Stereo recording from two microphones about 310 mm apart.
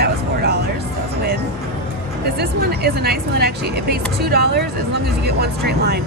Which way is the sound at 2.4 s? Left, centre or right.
Right.